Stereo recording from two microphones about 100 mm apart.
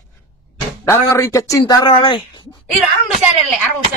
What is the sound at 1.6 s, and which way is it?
Speech, 50° left (ahead or behind).